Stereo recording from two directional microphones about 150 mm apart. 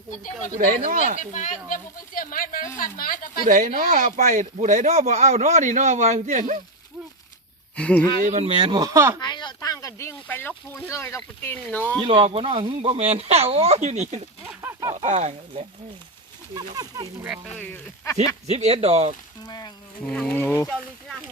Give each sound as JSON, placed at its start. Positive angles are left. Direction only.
{"t": 1.2, "sound": "speech", "side_deg": 55}
{"t": 3.4, "sound": "speech", "side_deg": -65}
{"t": 7.8, "sound": "speech", "side_deg": 10}
{"t": 8.2, "sound": "speech", "side_deg": -45}
{"t": 9.2, "sound": "speech", "side_deg": 30}
{"t": 11.9, "sound": "speech", "side_deg": -35}
{"t": 14.4, "sound": "speech", "side_deg": -15}
{"t": 14.9, "sound": "speech", "side_deg": -50}
{"t": 16.6, "sound": "speech", "side_deg": -25}
{"t": 17.5, "sound": "speech", "side_deg": 10}
{"t": 18.4, "sound": "speech", "side_deg": -45}
{"t": 19.5, "sound": "speech", "side_deg": 25}
{"t": 20.2, "sound": "speech", "side_deg": 15}